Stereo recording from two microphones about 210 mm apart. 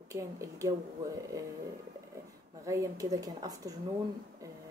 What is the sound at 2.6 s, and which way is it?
Speech, 15° right (ahead or behind).